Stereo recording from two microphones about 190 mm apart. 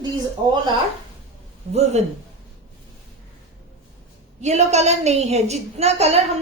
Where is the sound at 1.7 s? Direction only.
35° right (ahead or behind).